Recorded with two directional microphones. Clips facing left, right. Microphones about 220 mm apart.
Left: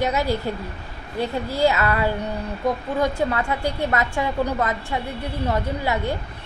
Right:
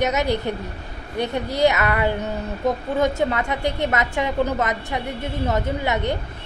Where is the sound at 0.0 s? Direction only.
20° right (ahead or behind).